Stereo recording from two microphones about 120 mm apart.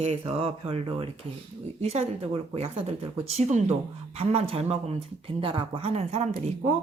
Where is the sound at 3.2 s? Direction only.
65° right (ahead or behind).